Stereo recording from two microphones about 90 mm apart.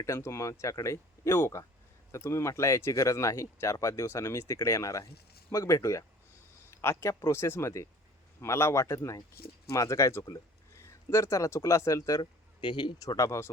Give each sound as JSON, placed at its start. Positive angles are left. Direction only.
{"t": 0.0, "sound": "speech", "side_deg": 35}
{"t": 12.6, "sound": "speech", "side_deg": 60}
{"t": 13.1, "sound": "speech", "side_deg": 35}